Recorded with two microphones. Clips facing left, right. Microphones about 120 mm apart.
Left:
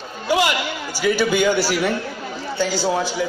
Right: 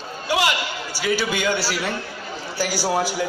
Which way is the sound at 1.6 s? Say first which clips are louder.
Left 6 dB; 50° left (ahead or behind).